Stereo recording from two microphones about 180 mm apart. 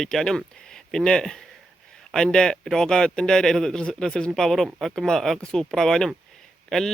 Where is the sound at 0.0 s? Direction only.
Centre (ahead or behind).